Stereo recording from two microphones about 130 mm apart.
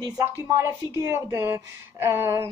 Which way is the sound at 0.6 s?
20° right (ahead or behind).